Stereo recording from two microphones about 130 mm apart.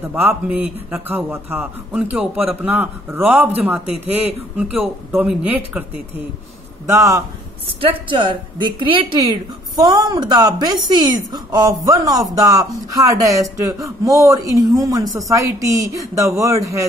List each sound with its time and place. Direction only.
0.1 s a man's voice: 15° right (ahead or behind)
6.9 s speech: 25° right (ahead or behind)
7.6 s a woman's voice: 40° right (ahead or behind); by 16.8 s 25° right (ahead or behind)